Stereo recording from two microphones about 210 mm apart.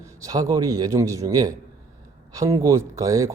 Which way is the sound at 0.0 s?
15° right (ahead or behind).